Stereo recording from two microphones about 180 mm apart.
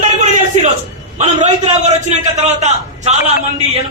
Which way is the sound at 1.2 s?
35° right (ahead or behind).